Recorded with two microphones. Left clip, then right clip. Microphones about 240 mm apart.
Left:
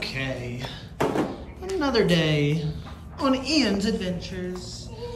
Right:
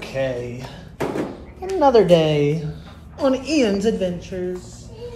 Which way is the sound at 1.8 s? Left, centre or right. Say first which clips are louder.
Right 10 dB; centre.